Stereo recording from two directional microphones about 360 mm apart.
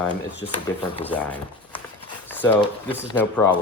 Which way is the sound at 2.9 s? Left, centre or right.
Centre.